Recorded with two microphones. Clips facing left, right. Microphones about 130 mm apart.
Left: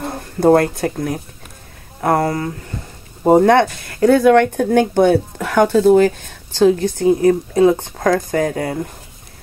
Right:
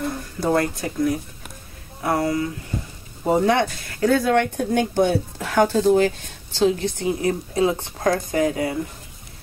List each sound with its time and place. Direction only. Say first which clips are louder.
0.0 s speech: left 9 dB; 50° left (ahead or behind)